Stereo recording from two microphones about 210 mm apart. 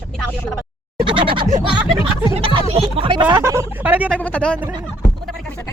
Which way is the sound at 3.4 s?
10° right (ahead or behind).